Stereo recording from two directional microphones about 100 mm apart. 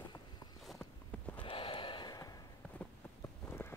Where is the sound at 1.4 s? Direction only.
55° left (ahead or behind).